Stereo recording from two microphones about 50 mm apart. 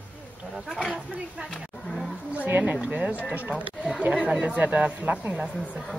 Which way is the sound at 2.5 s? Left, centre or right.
Right.